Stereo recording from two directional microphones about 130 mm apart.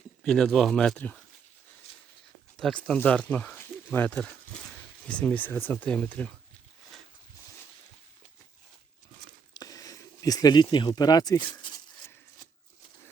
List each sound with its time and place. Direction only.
0.2 s speech: 5° left (ahead or behind)
2.6 s speech: 5° left (ahead or behind)
9.6 s a sound: 25° left (ahead or behind)